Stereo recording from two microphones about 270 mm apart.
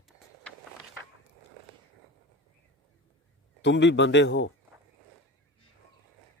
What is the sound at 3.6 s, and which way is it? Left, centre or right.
Speech, left.